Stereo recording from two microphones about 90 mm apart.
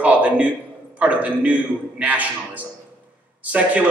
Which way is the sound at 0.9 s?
15° right (ahead or behind).